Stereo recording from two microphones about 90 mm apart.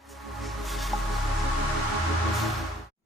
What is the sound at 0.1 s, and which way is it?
Music, centre (ahead or behind).